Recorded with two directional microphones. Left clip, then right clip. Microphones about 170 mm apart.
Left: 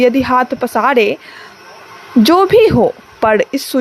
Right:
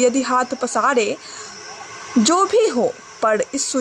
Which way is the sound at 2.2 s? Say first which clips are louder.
Left 7 dB; 35° left (ahead or behind).